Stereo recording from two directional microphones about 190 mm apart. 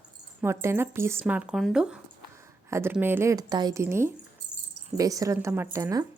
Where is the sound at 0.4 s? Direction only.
15° right (ahead or behind).